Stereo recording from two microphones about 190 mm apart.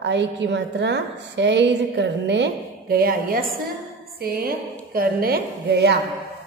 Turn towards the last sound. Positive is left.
turn(degrees=-60)  # may be behind; listen again after turning